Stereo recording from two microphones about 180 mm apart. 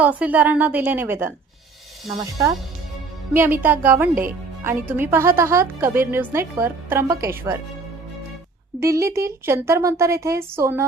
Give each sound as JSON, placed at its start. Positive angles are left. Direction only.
{"t": 0.0, "sound": "a woman's voice", "side_deg": -10}
{"t": 3.3, "sound": "a woman's voice", "side_deg": -10}
{"t": 8.8, "sound": "a woman's voice", "side_deg": -15}